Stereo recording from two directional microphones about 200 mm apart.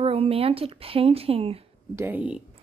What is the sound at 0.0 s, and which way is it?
Speech, 30° right (ahead or behind).